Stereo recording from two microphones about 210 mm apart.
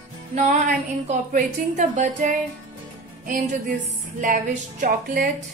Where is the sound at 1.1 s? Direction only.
35° right (ahead or behind).